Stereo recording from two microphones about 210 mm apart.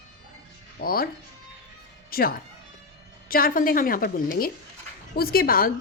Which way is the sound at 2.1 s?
45° left (ahead or behind).